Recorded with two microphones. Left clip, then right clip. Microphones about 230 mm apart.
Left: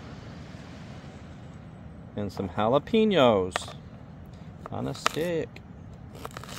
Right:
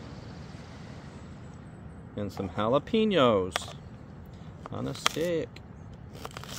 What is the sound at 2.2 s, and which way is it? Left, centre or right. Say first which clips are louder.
Speech: left 3 dB; left.